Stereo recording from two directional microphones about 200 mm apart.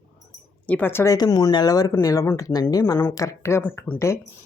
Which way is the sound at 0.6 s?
10° left (ahead or behind).